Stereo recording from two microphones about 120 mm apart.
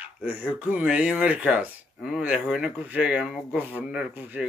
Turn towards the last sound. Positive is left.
turn(degrees=-15)  # may be behind; listen again after turning